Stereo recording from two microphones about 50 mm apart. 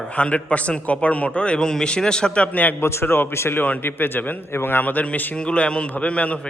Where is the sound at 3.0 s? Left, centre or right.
Left.